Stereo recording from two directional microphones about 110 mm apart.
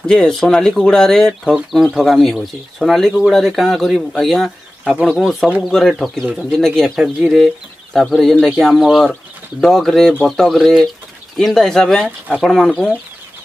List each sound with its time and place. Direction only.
0.0 s speech: 5° left (ahead or behind)